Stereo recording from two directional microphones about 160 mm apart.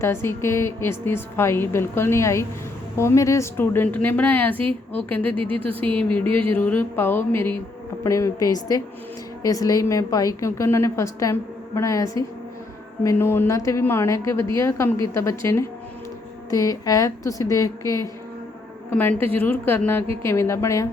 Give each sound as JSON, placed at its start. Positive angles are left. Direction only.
{"t": 0.0, "sound": "a woman's voice", "side_deg": 15}
{"t": 5.5, "sound": "speech", "side_deg": -35}
{"t": 5.8, "sound": "a woman's voice", "side_deg": 10}
{"t": 16.5, "sound": "a woman's voice", "side_deg": 20}